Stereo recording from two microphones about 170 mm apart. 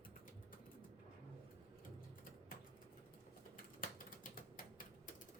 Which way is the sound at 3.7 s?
55° left (ahead or behind).